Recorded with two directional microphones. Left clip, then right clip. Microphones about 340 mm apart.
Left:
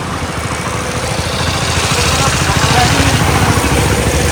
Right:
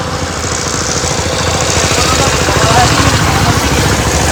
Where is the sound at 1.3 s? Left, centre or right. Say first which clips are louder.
Right 3 dB; right.